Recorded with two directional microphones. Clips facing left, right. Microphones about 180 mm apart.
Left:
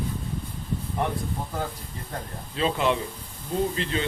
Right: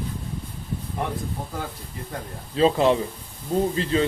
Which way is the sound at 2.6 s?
35° right (ahead or behind).